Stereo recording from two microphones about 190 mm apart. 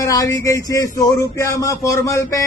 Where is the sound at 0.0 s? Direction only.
20° left (ahead or behind).